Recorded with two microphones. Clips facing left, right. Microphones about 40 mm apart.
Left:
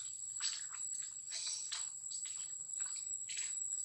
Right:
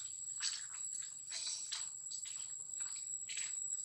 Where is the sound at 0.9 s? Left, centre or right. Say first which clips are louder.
Even; centre.